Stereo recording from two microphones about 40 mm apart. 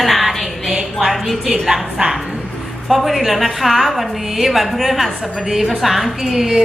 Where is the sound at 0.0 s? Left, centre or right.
Centre.